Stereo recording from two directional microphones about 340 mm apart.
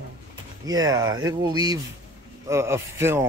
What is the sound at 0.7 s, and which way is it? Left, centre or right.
Speech, centre.